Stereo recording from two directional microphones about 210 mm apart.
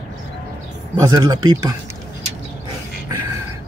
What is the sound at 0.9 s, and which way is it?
Speech, 15° right (ahead or behind).